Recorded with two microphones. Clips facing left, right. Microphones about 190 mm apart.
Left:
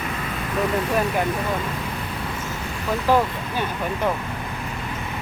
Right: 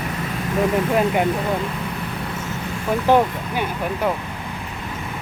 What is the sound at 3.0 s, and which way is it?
Speech, 20° right (ahead or behind).